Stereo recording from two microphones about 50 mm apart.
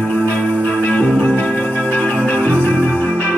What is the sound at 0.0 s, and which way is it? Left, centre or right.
Music, left.